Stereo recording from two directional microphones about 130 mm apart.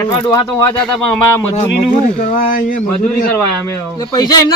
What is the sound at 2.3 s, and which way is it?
Speech, 90° left.